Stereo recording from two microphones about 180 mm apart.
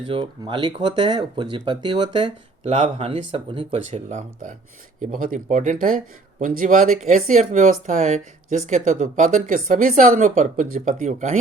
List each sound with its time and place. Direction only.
0.0 s speech: 30° right (ahead or behind)
4.9 s speech: 50° right (ahead or behind)